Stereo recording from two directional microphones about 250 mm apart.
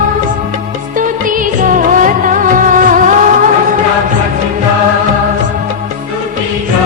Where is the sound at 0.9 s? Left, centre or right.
Right.